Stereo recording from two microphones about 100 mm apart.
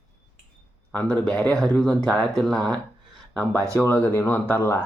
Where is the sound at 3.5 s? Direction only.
30° right (ahead or behind).